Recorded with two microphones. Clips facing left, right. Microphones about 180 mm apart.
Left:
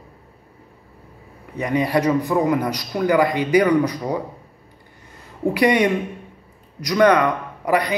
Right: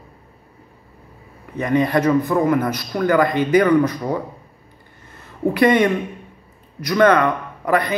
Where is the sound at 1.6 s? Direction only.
10° left (ahead or behind).